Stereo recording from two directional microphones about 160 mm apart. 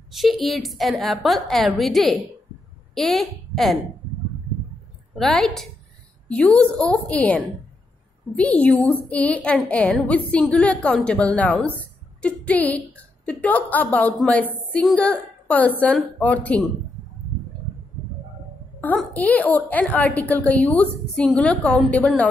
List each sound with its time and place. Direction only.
0.1 s a woman's voice: centre (ahead or behind)
5.1 s a woman's voice: centre (ahead or behind)
18.8 s a woman's voice: 10° left (ahead or behind)